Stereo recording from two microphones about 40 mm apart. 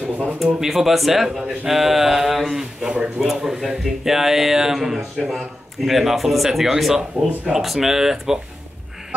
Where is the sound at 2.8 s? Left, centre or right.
Right.